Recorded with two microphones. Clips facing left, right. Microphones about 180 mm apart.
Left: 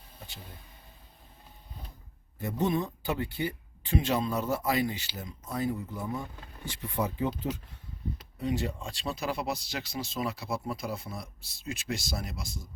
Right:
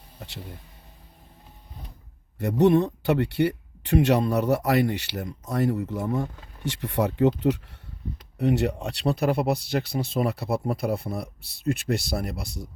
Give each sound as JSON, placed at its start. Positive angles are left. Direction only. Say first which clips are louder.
{"t": 2.4, "sound": "speech", "louder": "right 10 dB", "side_deg": -75}